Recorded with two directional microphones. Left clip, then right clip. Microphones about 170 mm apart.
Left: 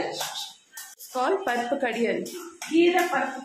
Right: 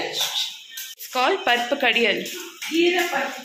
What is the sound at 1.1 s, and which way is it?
Speech, centre (ahead or behind).